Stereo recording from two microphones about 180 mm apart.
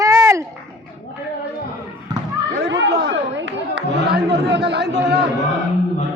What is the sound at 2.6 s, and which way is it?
Chatter, 75° right (ahead or behind).